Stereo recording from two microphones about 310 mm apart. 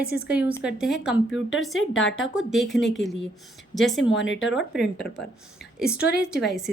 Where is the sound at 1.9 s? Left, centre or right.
Left.